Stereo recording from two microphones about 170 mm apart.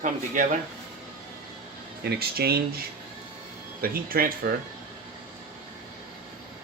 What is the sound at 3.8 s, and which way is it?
Speech, 60° right (ahead or behind).